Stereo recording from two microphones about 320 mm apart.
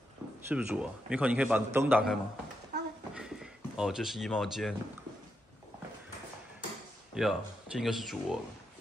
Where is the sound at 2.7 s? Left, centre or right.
Right.